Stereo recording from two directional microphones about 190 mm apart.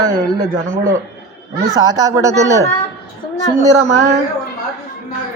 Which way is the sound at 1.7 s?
20° right (ahead or behind).